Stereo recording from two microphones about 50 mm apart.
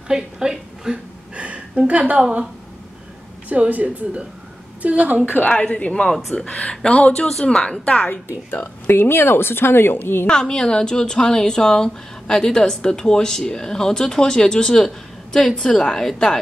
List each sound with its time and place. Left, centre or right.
0.1 s a woman's voice: centre
1.3 s a sound: right
1.9 s speech: right
3.4 s speech: right
5.6 s speech: left
6.0 s speech: centre
6.3 s speech: left
7.2 s a woman's voice: centre
8.3 s speech: left
10.2 s a woman's voice: centre